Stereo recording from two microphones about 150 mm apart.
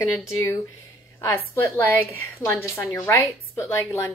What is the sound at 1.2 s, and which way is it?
A woman's voice, 15° left (ahead or behind).